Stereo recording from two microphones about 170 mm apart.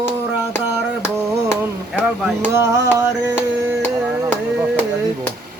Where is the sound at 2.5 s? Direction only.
15° right (ahead or behind).